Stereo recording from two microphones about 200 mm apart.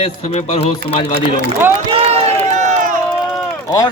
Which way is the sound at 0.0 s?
30° left (ahead or behind).